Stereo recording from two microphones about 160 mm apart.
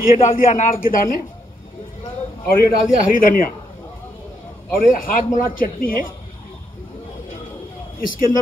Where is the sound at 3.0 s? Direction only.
60° left (ahead or behind).